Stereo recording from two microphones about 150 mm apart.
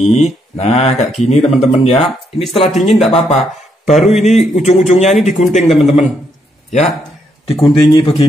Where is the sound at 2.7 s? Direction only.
Centre (ahead or behind).